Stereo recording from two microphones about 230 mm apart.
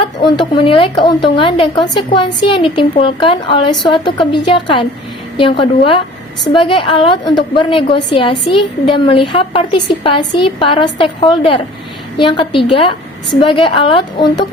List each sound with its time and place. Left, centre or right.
0.2 s a woman's voice: left